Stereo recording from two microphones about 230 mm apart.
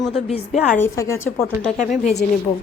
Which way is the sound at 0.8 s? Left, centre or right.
Centre.